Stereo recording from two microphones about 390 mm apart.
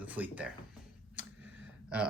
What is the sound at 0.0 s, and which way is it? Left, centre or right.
Speech, centre.